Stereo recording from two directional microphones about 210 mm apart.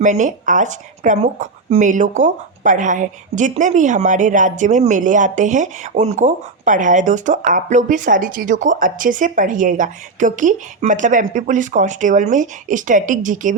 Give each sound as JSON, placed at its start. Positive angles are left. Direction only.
{"t": 0.0, "sound": "speech", "side_deg": -35}